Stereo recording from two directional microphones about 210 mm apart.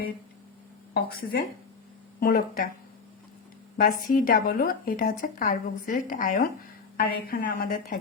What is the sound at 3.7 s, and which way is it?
A woman's voice, 40° left (ahead or behind).